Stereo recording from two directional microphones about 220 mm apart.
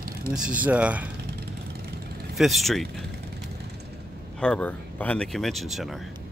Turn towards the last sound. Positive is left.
turn(degrees=0)  # may be behind; listen again after turning